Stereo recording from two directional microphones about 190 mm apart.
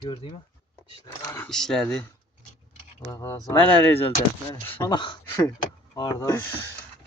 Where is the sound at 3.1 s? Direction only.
15° left (ahead or behind).